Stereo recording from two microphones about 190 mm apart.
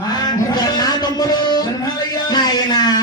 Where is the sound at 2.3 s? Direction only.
20° left (ahead or behind).